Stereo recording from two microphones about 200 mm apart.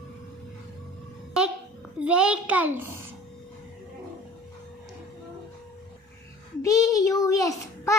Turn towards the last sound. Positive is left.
turn(degrees=15)  # may be behind; listen again after turning